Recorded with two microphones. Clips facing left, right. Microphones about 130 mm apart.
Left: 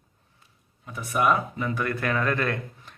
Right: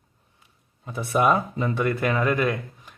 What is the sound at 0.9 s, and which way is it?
Speech, 30° right (ahead or behind).